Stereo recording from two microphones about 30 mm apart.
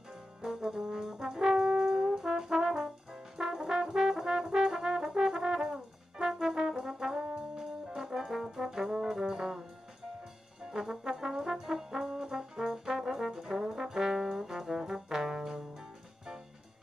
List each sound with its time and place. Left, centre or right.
0.4 s brass instrument: centre
9.3 s music: centre
10.6 s brass instrument: right
13.2 s trombone: centre